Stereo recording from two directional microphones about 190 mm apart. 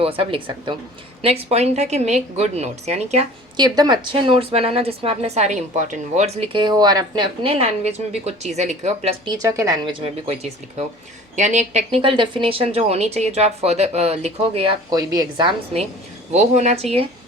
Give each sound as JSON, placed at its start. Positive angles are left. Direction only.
{"t": 0.0, "sound": "a woman's voice", "side_deg": -30}
{"t": 3.6, "sound": "a woman's voice", "side_deg": -20}